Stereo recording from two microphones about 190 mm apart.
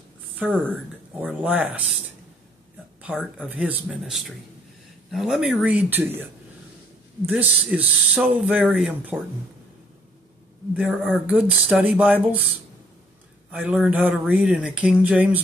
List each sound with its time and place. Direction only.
0.4 s speech: 5° right (ahead or behind)
3.4 s speech: 5° right (ahead or behind)
7.2 s speech: 5° right (ahead or behind)
10.7 s speech: 5° right (ahead or behind)
13.5 s speech: 5° right (ahead or behind)